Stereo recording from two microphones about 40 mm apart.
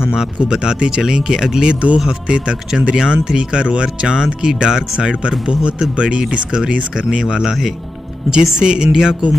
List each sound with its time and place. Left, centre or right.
0.1 s speech: centre
1.7 s speech: right
4.2 s speech: centre
5.5 s speech: right